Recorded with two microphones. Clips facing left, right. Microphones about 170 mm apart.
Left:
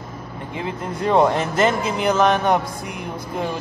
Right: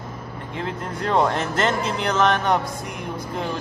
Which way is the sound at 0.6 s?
10° left (ahead or behind).